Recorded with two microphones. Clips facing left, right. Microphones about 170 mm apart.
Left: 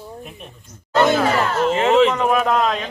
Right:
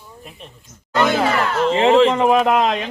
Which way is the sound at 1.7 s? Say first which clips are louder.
Right 2 dB; 30° right (ahead or behind).